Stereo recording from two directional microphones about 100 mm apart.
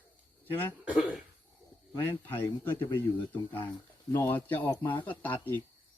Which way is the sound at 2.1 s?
20° left (ahead or behind).